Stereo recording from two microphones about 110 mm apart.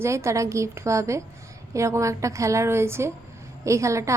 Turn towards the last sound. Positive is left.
turn(degrees=-30)  # may be behind; listen again after turning